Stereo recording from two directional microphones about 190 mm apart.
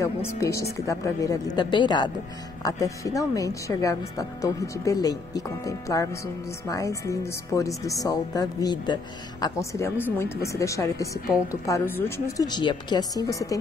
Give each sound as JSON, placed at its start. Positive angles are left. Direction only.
{"t": 0.4, "sound": "speech", "side_deg": 15}